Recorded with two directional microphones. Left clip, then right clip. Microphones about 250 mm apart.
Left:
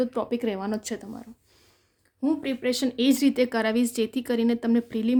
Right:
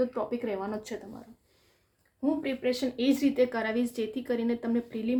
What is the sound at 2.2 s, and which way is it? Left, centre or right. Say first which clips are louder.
A woman's voice: left 3 dB; left.